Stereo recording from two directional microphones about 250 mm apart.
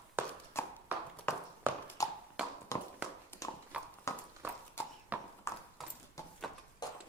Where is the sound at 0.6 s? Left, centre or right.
Centre.